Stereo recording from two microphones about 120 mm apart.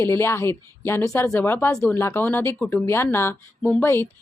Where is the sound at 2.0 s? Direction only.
20° left (ahead or behind).